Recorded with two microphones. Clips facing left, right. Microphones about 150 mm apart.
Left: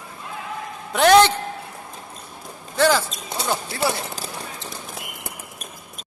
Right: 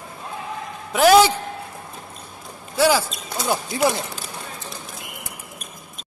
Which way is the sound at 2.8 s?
10° right (ahead or behind).